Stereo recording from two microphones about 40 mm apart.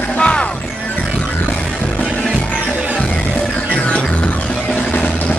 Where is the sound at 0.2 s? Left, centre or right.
Left.